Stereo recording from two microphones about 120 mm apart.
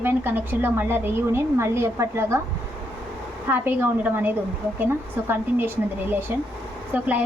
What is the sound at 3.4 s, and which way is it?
A woman's voice, 15° right (ahead or behind).